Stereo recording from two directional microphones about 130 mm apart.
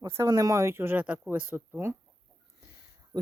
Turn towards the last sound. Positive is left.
turn(degrees=-30)  # may be behind; listen again after turning